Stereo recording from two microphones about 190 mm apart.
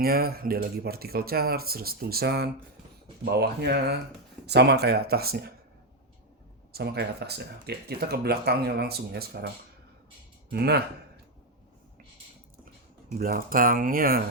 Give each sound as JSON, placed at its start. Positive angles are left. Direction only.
{"t": 0.0, "sound": "speech", "side_deg": -55}
{"t": 6.7, "sound": "speech", "side_deg": -60}
{"t": 10.5, "sound": "speech", "side_deg": -60}
{"t": 13.1, "sound": "speech", "side_deg": -50}